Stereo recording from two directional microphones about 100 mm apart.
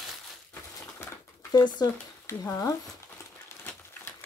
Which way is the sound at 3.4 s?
25° left (ahead or behind).